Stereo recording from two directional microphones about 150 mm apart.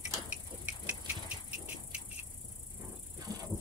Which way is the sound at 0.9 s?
10° right (ahead or behind).